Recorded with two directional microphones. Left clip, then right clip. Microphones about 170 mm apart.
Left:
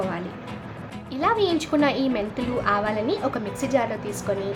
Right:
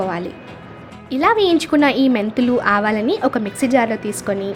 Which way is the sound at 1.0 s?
35° right (ahead or behind).